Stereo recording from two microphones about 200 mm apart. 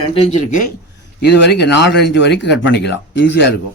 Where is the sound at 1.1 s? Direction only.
55° left (ahead or behind).